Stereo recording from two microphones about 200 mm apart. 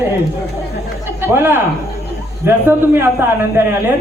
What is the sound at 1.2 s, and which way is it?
A woman's voice, 10° right (ahead or behind).